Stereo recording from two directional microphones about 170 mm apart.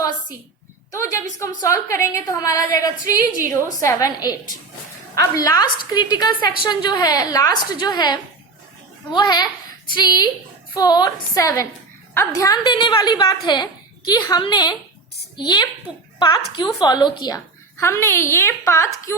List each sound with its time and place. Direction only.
0.9 s a woman's voice: 20° left (ahead or behind)